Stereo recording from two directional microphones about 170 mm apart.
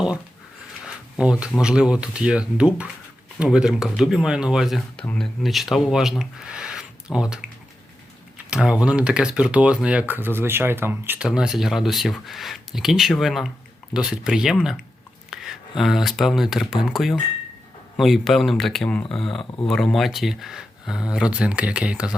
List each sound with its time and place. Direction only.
1.2 s speech: 5° right (ahead or behind)
8.4 s speech: 5° right (ahead or behind)
15.3 s a sound: centre (ahead or behind)
15.8 s speech: centre (ahead or behind)